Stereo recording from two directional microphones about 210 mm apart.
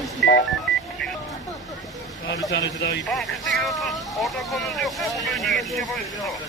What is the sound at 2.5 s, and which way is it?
Speech, 55° left (ahead or behind).